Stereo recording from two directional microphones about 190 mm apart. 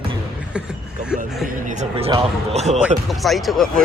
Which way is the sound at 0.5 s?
5° right (ahead or behind).